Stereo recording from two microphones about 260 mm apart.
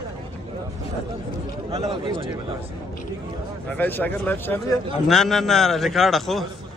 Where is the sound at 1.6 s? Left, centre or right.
Right.